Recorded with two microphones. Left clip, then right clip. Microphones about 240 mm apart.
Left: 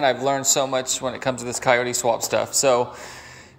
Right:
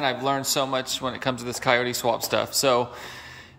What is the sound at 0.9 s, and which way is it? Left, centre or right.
Speech, right.